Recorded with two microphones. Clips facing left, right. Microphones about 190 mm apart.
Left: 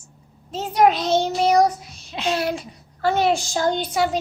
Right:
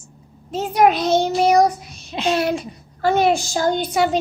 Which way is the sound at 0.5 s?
10° right (ahead or behind).